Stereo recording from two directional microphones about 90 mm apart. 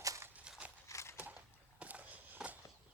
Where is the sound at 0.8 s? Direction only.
35° left (ahead or behind).